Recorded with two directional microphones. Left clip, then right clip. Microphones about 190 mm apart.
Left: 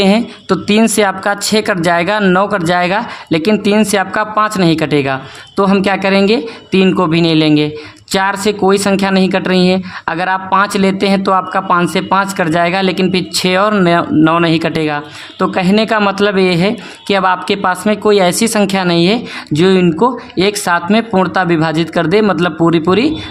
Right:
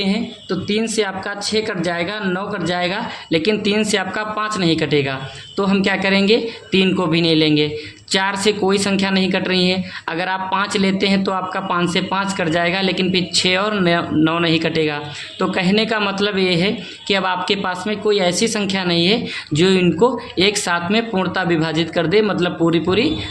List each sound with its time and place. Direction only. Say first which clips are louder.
0.0 s speech: left 10 dB; 40° left (ahead or behind)